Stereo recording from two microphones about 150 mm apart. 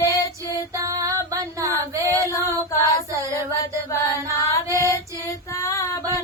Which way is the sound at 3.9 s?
20° left (ahead or behind).